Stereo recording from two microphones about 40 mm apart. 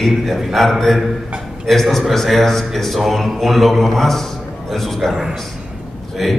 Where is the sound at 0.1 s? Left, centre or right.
Centre.